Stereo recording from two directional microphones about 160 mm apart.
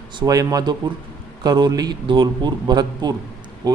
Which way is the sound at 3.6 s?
25° right (ahead or behind).